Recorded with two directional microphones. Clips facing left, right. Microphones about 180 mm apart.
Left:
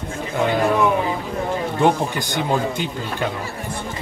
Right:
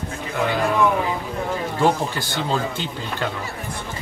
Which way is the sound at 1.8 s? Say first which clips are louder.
Left 2 dB; 15° left (ahead or behind).